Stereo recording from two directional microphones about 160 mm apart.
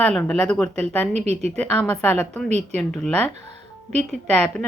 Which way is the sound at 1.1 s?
45° right (ahead or behind).